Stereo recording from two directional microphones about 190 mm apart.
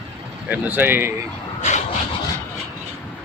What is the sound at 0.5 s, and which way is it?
Speech, 10° right (ahead or behind).